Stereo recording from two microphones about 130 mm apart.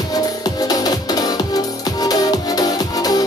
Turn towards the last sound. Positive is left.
turn(degrees=30)  # may be behind; listen again after turning